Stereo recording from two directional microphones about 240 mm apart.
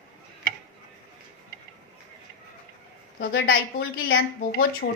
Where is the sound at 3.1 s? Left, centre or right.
Left.